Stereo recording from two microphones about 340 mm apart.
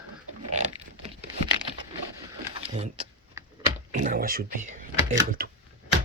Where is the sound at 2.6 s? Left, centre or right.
Centre.